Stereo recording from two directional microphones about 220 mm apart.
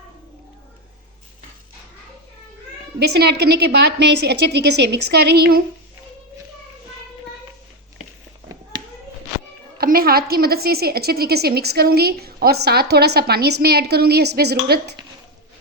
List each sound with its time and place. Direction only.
3.1 s a woman's voice: 50° right (ahead or behind)
9.7 s a woman's voice: 40° right (ahead or behind)